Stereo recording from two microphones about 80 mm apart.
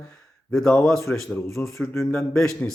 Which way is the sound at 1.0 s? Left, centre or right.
Left.